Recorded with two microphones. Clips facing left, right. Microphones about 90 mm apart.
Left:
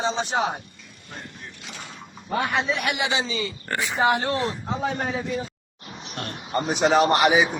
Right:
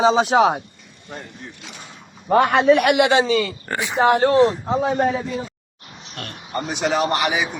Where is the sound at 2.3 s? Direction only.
60° right (ahead or behind).